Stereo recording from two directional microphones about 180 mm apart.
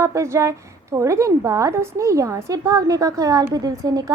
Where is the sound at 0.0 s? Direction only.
15° right (ahead or behind).